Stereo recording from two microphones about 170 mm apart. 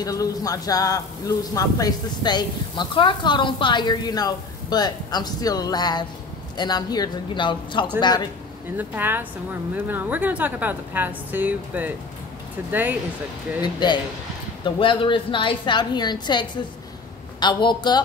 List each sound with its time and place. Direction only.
0.0 s a man's voice: 20° left (ahead or behind)
8.7 s a woman's voice: 10° right (ahead or behind)
13.6 s a man's voice: 25° left (ahead or behind)